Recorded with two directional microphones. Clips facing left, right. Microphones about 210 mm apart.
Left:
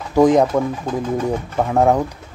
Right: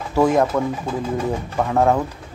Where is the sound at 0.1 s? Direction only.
15° left (ahead or behind).